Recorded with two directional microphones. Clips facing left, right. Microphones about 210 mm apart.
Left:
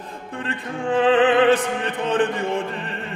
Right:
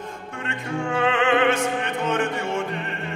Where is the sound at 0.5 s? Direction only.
35° left (ahead or behind).